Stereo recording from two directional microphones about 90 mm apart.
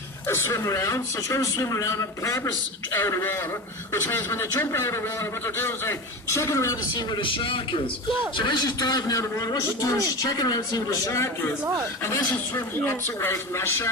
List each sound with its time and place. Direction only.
0.3 s a man's voice: 30° left (ahead or behind)
6.9 s a man's voice: 60° left (ahead or behind)
8.4 s a man's voice: 50° left (ahead or behind); by 13.9 s 30° left (ahead or behind)